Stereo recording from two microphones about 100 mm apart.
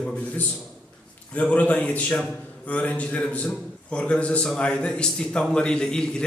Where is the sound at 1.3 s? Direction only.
15° left (ahead or behind).